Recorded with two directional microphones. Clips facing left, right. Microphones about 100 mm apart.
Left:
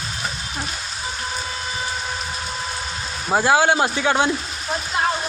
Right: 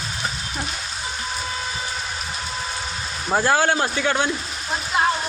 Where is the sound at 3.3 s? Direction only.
15° left (ahead or behind).